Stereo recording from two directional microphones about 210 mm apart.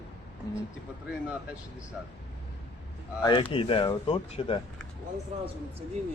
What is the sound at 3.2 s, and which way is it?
Speech, 20° left (ahead or behind).